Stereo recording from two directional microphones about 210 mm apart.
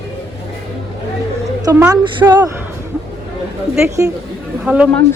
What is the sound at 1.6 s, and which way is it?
Speech, 15° right (ahead or behind).